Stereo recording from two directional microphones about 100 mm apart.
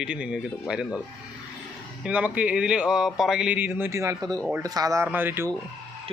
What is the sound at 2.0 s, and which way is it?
Speech, 15° right (ahead or behind).